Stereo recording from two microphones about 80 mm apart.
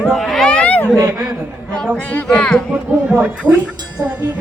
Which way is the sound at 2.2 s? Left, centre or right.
Centre.